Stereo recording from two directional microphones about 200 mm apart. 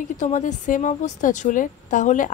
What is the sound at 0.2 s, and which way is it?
A woman's voice, 35° left (ahead or behind).